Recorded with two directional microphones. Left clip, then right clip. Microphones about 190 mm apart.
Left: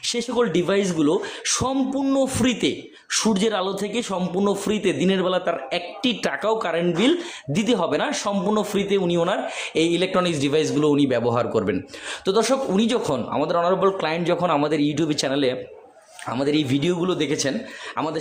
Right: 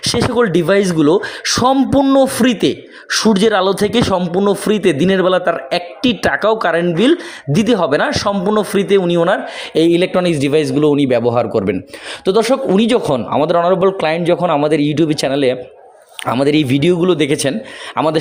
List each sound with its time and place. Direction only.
0.0 s a man's voice: 40° right (ahead or behind)
4.4 s a man's voice: 25° right (ahead or behind)
12.2 s a man's voice: 30° right (ahead or behind)